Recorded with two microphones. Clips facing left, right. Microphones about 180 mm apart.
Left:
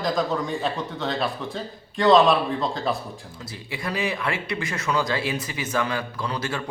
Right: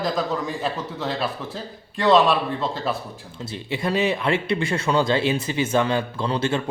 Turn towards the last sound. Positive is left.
turn(degrees=-25)  # may be behind; listen again after turning